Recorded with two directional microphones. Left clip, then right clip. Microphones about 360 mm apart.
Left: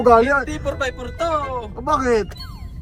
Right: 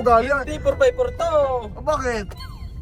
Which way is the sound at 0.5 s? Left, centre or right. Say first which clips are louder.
Right 6 dB; centre.